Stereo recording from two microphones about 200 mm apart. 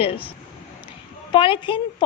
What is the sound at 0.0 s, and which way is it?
A woman's voice, 25° left (ahead or behind).